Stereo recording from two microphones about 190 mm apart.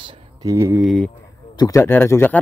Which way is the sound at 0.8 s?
Centre (ahead or behind).